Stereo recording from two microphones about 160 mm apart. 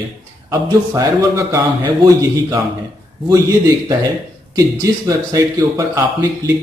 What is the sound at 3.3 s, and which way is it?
Speech, 20° right (ahead or behind).